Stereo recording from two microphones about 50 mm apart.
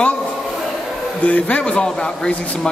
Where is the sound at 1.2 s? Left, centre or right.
Left.